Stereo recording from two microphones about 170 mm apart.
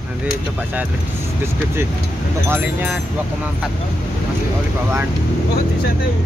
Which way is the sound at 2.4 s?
15° right (ahead or behind).